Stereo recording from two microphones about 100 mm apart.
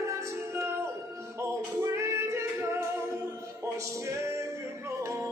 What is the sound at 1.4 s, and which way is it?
Music, 30° right (ahead or behind).